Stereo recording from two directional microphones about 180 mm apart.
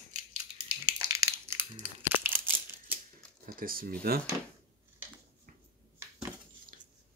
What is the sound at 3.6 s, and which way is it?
Speech, 55° right (ahead or behind).